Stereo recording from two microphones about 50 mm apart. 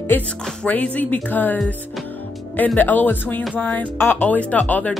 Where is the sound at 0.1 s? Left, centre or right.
Left.